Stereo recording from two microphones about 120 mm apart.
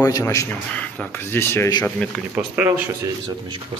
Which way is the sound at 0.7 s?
15° left (ahead or behind).